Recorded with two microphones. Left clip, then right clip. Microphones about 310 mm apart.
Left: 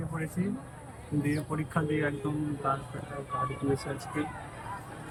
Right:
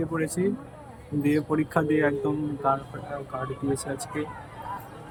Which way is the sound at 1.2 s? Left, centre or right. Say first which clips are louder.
Right 9 dB; right.